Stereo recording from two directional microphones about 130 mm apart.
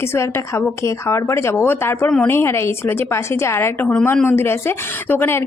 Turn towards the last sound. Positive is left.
turn(degrees=15)  # may be behind; listen again after turning